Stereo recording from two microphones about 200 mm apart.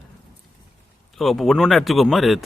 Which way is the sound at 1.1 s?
Centre (ahead or behind).